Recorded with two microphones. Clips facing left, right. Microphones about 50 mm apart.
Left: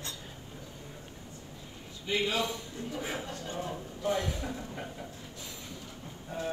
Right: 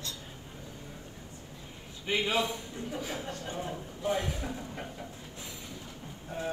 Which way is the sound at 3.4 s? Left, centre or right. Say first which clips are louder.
Even; right.